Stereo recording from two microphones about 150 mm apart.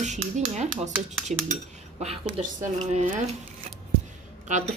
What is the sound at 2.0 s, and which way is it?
Speech, 40° right (ahead or behind).